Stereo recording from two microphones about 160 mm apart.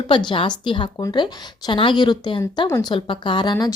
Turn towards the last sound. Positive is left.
turn(degrees=30)  # may be behind; listen again after turning